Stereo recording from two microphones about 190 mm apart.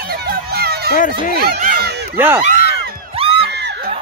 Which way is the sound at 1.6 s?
50° right (ahead or behind).